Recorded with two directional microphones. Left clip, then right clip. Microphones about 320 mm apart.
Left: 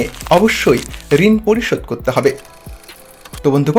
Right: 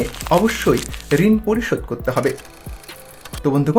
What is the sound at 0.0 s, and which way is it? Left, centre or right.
Speech, centre.